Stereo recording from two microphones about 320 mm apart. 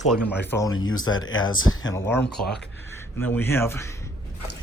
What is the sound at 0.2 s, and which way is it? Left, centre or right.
Speech, left.